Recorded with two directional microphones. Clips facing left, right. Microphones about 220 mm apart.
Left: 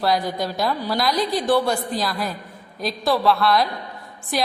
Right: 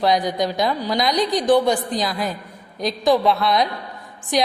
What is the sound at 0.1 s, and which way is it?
Speech, 20° right (ahead or behind).